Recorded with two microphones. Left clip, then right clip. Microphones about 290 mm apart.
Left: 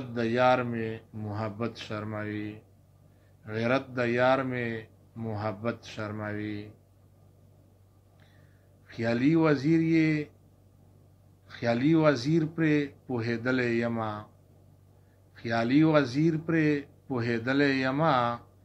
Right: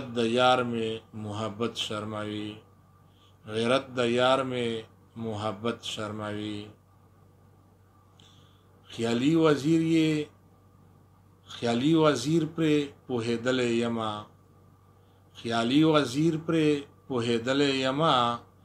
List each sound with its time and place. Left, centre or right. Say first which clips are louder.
0.1 s speech: right 1 dB; right
8.9 s speech: even; right
11.5 s speech: even; right
15.3 s speech: even; right